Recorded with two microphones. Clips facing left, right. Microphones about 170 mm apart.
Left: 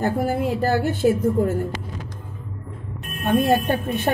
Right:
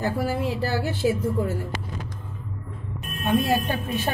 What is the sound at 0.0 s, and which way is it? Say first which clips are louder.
A woman's voice: left 4 dB; 50° left (ahead or behind).